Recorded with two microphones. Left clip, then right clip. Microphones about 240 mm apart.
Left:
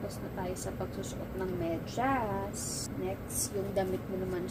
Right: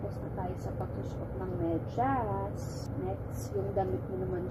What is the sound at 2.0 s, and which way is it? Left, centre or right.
Speech, left.